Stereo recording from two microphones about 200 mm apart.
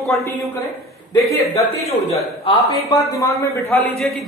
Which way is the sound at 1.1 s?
30° left (ahead or behind).